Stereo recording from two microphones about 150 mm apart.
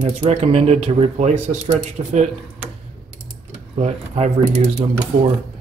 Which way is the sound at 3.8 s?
50° right (ahead or behind).